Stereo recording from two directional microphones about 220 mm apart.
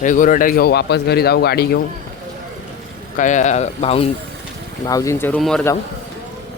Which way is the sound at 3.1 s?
35° left (ahead or behind).